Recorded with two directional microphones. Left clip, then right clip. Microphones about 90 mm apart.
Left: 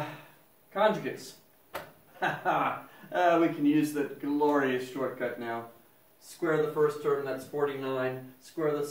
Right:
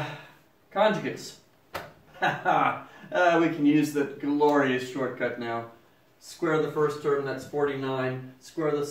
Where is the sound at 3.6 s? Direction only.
30° right (ahead or behind).